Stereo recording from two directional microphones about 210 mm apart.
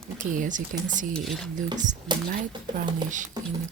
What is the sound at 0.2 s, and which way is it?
Speech, 40° right (ahead or behind).